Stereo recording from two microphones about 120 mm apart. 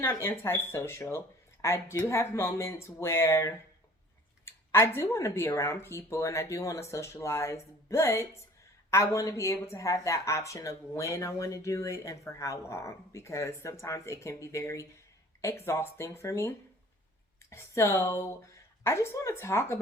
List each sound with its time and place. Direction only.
0.0 s speech: 20° left (ahead or behind)